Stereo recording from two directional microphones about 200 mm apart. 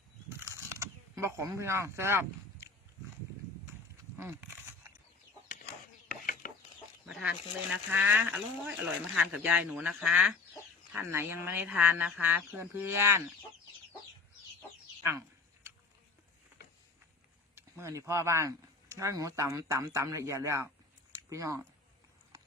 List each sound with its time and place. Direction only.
0.3 s mechanisms: 15° right (ahead or behind)
4.2 s a sound: 10° right (ahead or behind)
6.1 s ratchet: 45° left (ahead or behind)
7.0 s speech: 5° right (ahead or behind)
17.5 s speech: 15° right (ahead or behind)